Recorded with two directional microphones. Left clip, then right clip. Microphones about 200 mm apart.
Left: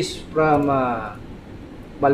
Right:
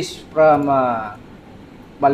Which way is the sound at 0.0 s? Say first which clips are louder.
Right 6 dB; 35° right (ahead or behind).